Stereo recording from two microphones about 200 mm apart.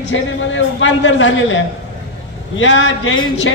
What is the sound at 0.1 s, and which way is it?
A man's voice, 70° left (ahead or behind).